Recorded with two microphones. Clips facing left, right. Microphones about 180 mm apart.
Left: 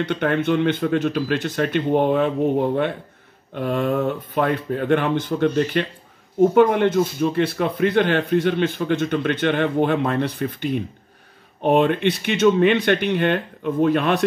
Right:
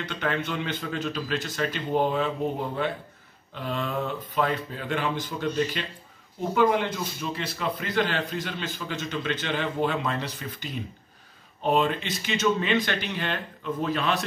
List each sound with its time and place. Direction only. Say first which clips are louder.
0.1 s speech: left 8 dB; 55° left (ahead or behind)